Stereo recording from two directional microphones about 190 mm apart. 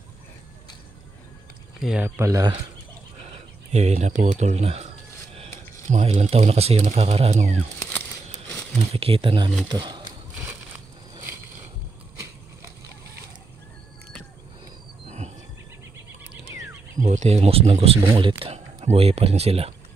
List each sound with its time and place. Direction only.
1.8 s speech: 5° right (ahead or behind)
3.7 s speech: 35° right (ahead or behind)
7.8 s a sound: 10° left (ahead or behind)
8.7 s speech: 30° right (ahead or behind)
10.3 s a sound: 10° right (ahead or behind)
15.0 s wild animals: 35° right (ahead or behind)
17.0 s speech: 40° right (ahead or behind)